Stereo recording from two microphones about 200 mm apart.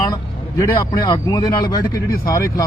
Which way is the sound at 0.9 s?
20° left (ahead or behind).